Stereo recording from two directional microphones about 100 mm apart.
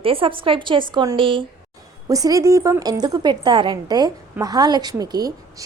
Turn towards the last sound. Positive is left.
turn(degrees=-40)  # may be behind; listen again after turning